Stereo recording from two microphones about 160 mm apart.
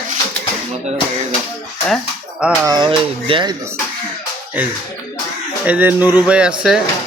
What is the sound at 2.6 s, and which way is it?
Speech, 25° right (ahead or behind).